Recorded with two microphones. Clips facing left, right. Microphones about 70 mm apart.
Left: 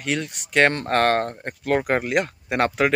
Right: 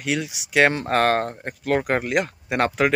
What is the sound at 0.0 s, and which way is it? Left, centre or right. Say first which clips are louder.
Speech: right 1 dB; centre.